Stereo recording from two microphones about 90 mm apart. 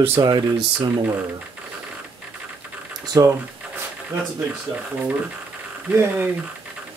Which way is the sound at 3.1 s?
40° right (ahead or behind).